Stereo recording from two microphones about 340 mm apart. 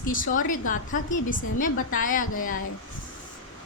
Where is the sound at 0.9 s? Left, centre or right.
Left.